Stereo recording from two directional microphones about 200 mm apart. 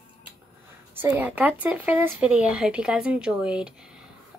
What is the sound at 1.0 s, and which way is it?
Speech, 10° right (ahead or behind).